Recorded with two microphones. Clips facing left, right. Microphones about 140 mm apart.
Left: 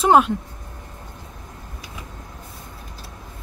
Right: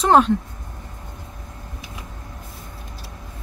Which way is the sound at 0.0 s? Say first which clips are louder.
Even; 5° left (ahead or behind).